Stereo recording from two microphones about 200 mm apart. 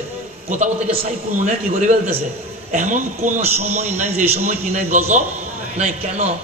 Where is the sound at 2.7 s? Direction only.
40° right (ahead or behind).